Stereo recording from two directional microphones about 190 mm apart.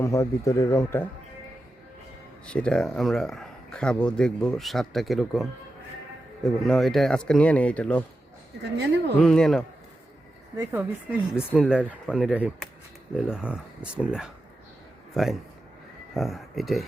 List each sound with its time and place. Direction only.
0.0 s speech: 15° left (ahead or behind)
2.5 s speech: 5° left (ahead or behind)
8.7 s speech: 65° right (ahead or behind)
9.2 s speech: 5° left (ahead or behind)
10.6 s speech: 10° right (ahead or behind)